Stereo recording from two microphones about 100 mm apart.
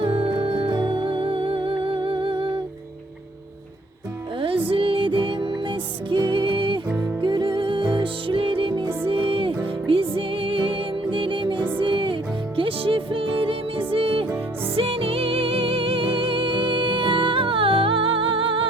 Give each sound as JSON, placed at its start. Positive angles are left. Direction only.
{"t": 0.0, "sound": "music", "side_deg": -60}
{"t": 4.4, "sound": "music", "side_deg": -65}